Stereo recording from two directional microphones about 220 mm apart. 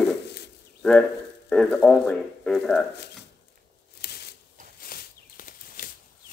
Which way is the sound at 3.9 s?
45° left (ahead or behind).